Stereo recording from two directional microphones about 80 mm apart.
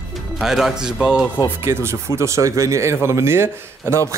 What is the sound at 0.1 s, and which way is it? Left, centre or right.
Speech, centre.